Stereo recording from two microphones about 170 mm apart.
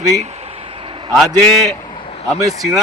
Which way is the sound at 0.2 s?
40° right (ahead or behind).